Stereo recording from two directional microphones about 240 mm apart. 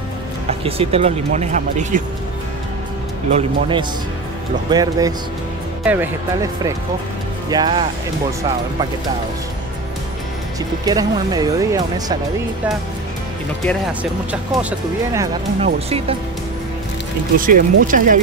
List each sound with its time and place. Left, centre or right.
0.5 s speech: right
3.3 s speech: right
10.9 s speech: centre
14.3 s speech: centre
15.6 s speech: right
17.4 s speech: right